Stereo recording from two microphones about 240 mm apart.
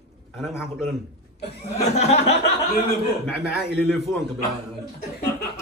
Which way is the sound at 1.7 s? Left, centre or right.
Left.